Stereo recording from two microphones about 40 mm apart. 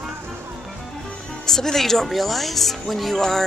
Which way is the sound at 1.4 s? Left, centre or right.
Centre.